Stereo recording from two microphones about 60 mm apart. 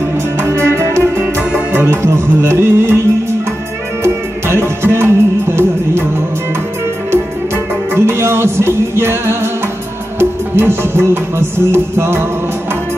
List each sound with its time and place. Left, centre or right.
0.4 s music: right
4.0 s music: right
7.9 s music: right